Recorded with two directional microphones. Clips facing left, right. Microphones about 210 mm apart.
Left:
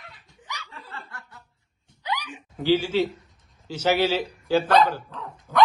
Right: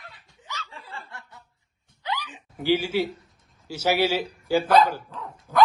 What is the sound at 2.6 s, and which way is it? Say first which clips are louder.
A man's voice: left 2 dB; 10° right (ahead or behind).